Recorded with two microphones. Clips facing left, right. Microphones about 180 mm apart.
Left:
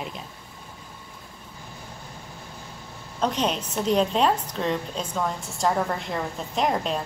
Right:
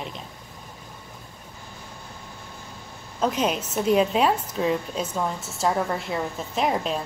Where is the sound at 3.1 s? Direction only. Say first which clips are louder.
Right 1 dB; 5° right (ahead or behind).